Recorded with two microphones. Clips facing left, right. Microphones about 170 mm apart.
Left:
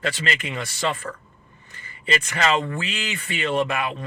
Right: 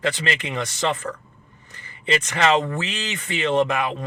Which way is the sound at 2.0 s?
25° right (ahead or behind).